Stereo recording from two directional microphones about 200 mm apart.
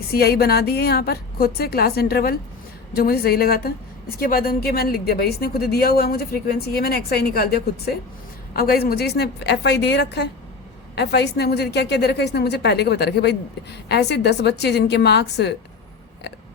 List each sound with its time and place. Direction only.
0.1 s a woman's voice: 50° left (ahead or behind)